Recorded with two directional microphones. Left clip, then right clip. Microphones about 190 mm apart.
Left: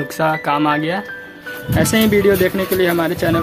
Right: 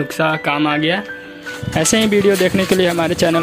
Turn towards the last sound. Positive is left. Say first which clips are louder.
# right 1 dB
turn(degrees=-45)  # may be behind; listen again after turning